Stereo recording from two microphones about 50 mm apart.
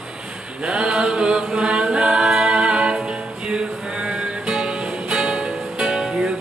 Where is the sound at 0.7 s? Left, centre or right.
Centre.